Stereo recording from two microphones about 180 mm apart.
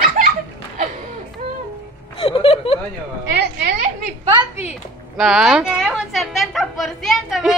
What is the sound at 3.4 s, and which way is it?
Speech, 65° right (ahead or behind).